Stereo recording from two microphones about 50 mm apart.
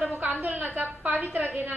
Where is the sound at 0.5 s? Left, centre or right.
Right.